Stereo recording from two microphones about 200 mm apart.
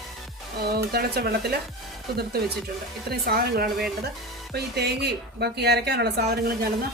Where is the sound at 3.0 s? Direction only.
50° right (ahead or behind).